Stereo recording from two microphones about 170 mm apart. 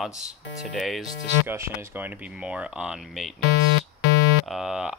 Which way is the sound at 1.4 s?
15° right (ahead or behind).